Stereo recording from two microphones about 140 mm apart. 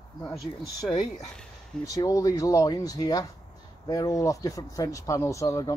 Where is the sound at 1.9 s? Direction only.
25° left (ahead or behind).